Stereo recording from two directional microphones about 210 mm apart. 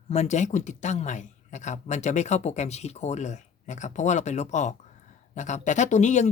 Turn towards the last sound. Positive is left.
turn(degrees=35)  # may be behind; listen again after turning